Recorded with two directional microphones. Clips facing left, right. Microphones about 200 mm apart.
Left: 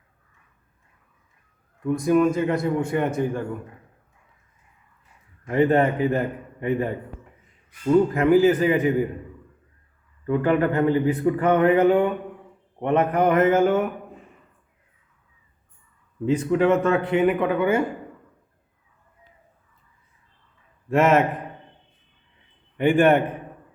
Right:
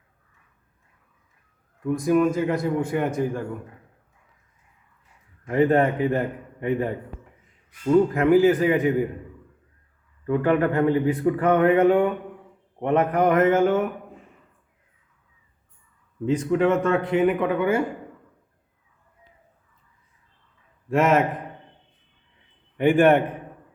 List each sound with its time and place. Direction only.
1.8 s speech: centre (ahead or behind)
5.5 s speech: centre (ahead or behind)
10.2 s speech: centre (ahead or behind)
16.2 s speech: 5° left (ahead or behind)
20.9 s speech: 5° left (ahead or behind)
22.8 s speech: centre (ahead or behind)